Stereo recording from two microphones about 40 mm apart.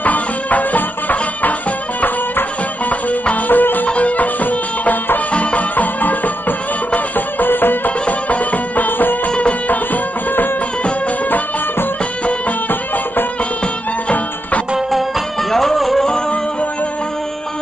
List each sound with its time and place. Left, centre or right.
0.0 s music: left
5.3 s music: left
15.5 s music: centre